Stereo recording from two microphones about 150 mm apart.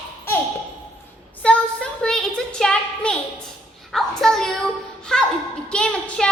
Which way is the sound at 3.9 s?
Centre (ahead or behind).